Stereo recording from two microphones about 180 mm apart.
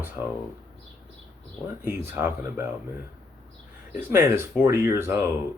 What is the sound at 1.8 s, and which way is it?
Speech, 10° right (ahead or behind).